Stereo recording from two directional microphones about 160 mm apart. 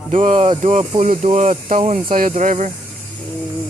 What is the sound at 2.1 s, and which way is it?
Speech, 55° right (ahead or behind).